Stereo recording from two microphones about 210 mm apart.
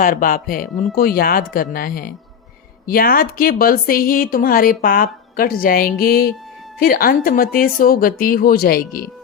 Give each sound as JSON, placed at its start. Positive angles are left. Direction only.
{"t": 0.0, "sound": "a woman's voice", "side_deg": 40}